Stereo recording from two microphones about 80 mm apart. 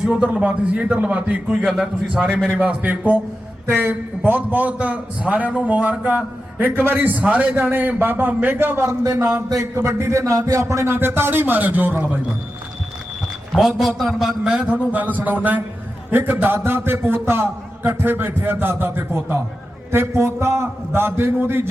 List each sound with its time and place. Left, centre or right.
0.0 s a man's voice: centre
1.6 s a man's voice: centre
7.5 s a man's voice: right
8.9 s a man's voice: right
13.6 s a man's voice: centre; by 21.7 s right